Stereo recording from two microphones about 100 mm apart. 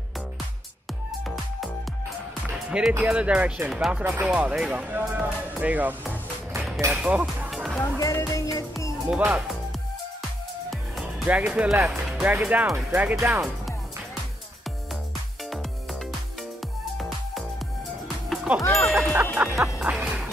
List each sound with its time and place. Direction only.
2.5 s music: 10° right (ahead or behind)
3.0 s speech: 10° right (ahead or behind)
4.0 s speech: 15° right (ahead or behind)
6.5 s a sound: 20° right (ahead or behind)
6.9 s speech: 5° right (ahead or behind)
7.5 s music: centre (ahead or behind)
7.8 s music: 35° left (ahead or behind)
9.0 s speech: 10° right (ahead or behind)
10.7 s music: centre (ahead or behind)
11.2 s speech: 15° right (ahead or behind)
15.5 s music: centre (ahead or behind)
18.0 s music: centre (ahead or behind)
18.6 s music: 30° left (ahead or behind)
19.3 s music: 20° right (ahead or behind)